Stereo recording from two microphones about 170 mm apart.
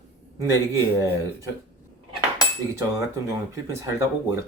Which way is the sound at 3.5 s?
15° right (ahead or behind).